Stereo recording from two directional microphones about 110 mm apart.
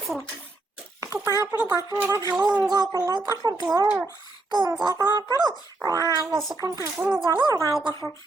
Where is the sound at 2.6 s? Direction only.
35° right (ahead or behind).